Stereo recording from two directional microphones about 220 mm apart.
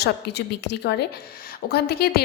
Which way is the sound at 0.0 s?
50° left (ahead or behind).